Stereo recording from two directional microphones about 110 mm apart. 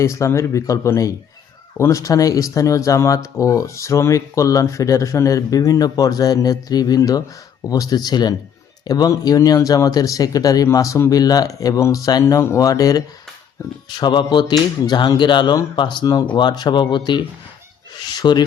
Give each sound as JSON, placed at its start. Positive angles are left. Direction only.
{"t": 0.0, "sound": "speech", "side_deg": 25}